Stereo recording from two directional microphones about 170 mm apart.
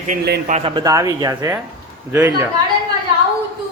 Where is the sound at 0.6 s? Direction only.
25° right (ahead or behind).